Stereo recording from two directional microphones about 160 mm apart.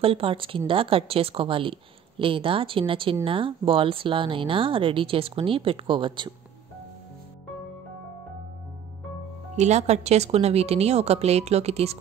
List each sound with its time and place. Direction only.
0.0 s a woman's voice: 35° right (ahead or behind)
9.6 s a woman's voice: 45° right (ahead or behind)